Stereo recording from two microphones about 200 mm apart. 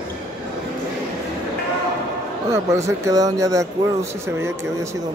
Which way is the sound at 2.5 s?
15° right (ahead or behind).